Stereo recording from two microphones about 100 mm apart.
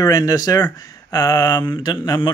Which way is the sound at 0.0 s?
40° left (ahead or behind).